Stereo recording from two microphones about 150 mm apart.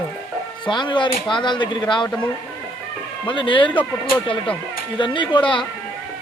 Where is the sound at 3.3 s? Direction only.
35° left (ahead or behind).